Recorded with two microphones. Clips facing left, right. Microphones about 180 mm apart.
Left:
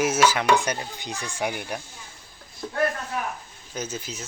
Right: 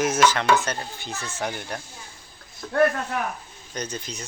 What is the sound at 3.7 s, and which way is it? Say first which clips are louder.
Speech: even; 5° left (ahead or behind).